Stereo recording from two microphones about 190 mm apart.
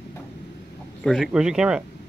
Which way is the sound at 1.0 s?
Centre (ahead or behind).